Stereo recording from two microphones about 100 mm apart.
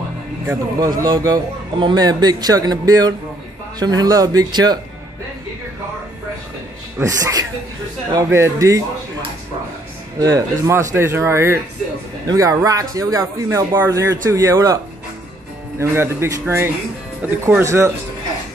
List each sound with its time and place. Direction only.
0.7 s a man's voice: 40° right (ahead or behind)
7.0 s a man's voice: 35° right (ahead or behind)
10.1 s a man's voice: 35° right (ahead or behind)
15.8 s speech: 25° right (ahead or behind)